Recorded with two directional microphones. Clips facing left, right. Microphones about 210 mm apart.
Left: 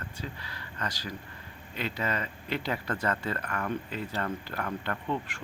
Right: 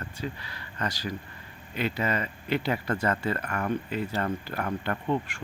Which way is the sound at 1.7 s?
5° right (ahead or behind).